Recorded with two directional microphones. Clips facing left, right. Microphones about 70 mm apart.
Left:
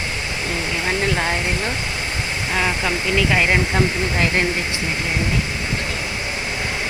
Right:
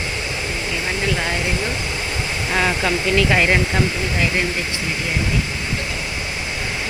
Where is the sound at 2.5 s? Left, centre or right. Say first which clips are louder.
Right 2 dB; centre.